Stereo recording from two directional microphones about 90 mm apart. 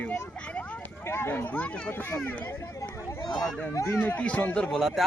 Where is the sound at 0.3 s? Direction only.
15° left (ahead or behind).